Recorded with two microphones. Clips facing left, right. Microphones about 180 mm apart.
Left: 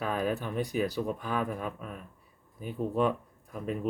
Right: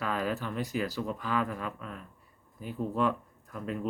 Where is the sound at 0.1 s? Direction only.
15° left (ahead or behind).